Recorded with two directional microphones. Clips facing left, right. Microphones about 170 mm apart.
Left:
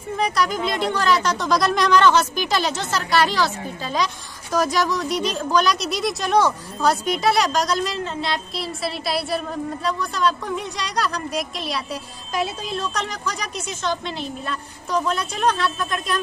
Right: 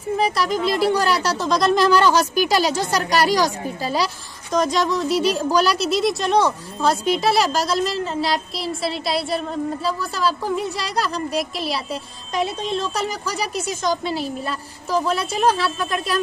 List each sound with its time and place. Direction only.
0.3 s a woman's voice: centre (ahead or behind)
3.0 s a woman's voice: 40° right (ahead or behind)
3.4 s speech: 10° right (ahead or behind)
4.5 s a woman's voice: 5° left (ahead or behind)